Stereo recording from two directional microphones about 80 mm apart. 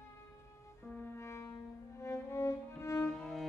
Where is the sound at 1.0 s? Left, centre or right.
Left.